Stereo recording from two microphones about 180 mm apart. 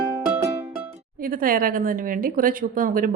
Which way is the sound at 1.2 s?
50° right (ahead or behind).